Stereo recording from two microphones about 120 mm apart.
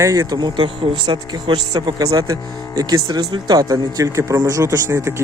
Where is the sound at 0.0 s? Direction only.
25° right (ahead or behind).